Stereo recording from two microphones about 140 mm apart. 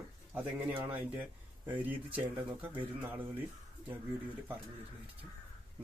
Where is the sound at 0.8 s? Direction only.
15° right (ahead or behind).